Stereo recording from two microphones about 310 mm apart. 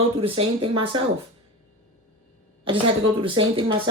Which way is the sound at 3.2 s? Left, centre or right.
Centre.